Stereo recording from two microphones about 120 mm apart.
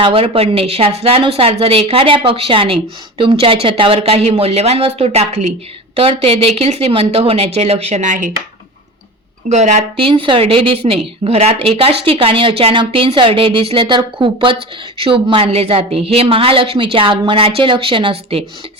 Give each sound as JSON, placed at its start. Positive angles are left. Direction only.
{"t": 0.0, "sound": "speech", "side_deg": -50}
{"t": 9.5, "sound": "a woman's voice", "side_deg": -75}
{"t": 10.0, "sound": "speech", "side_deg": -45}